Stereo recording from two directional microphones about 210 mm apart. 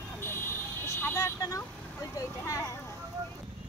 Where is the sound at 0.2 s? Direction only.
10° left (ahead or behind).